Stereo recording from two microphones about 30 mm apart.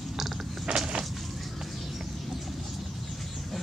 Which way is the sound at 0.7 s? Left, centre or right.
Right.